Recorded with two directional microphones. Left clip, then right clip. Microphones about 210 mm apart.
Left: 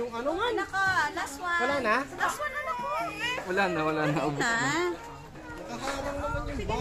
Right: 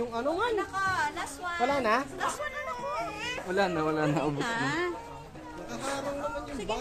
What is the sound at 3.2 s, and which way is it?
Speech, 15° right (ahead or behind).